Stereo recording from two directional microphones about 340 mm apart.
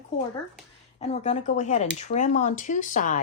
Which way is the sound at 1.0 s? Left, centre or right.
Centre.